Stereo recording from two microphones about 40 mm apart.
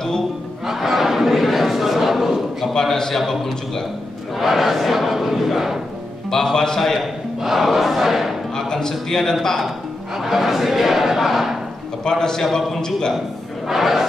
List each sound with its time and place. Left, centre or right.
0.7 s a sound: centre
2.7 s a man's voice: centre
4.4 s battle cry: centre
6.3 s a man's voice: centre
7.3 s a sound: centre
8.5 s a man's voice: centre
10.1 s a man's voice: centre
12.0 s a man's voice: centre
13.7 s a man's voice: centre